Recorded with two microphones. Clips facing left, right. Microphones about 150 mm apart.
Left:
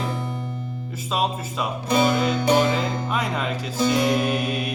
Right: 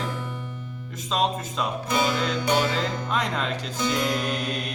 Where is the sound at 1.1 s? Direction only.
5° left (ahead or behind).